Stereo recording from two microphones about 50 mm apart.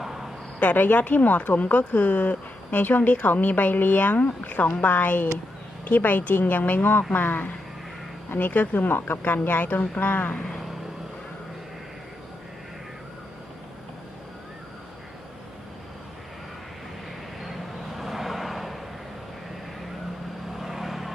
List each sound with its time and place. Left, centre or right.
0.0 s cricket: centre
0.6 s speech: left
17.4 s vehicle: centre
20.6 s vehicle: centre